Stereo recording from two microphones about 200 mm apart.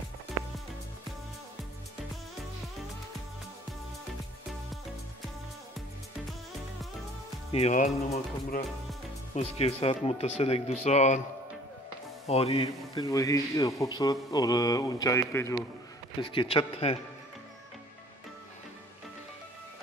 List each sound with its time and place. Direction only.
7.5 s speech: 35° left (ahead or behind)
12.3 s a man's voice: 30° left (ahead or behind)
13.0 s speech: 15° left (ahead or behind)
16.2 s a man's voice: 25° left (ahead or behind)